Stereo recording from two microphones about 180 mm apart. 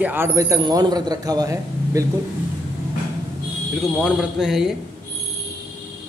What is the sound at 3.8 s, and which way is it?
Speech, centre (ahead or behind).